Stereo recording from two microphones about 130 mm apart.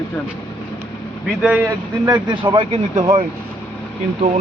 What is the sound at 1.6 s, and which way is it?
Speech, 30° right (ahead or behind).